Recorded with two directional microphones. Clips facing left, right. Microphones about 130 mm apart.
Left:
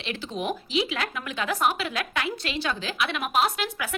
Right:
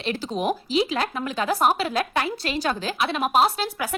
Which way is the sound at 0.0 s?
40° right (ahead or behind).